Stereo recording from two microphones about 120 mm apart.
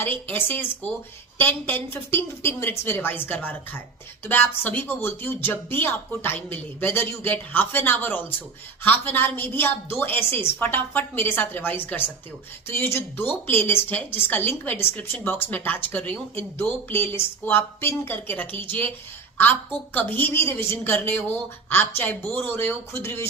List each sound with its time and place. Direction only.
0.0 s a woman's voice: 15° left (ahead or behind)